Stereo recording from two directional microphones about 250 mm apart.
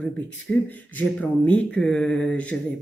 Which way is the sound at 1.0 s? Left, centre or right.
Centre.